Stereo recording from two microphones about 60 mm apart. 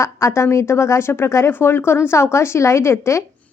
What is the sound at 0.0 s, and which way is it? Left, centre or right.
A woman's voice, left.